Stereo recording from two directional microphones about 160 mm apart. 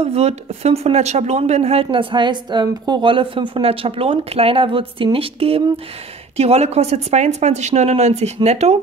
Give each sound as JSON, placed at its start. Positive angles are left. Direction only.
{"t": 0.0, "sound": "speech", "side_deg": -40}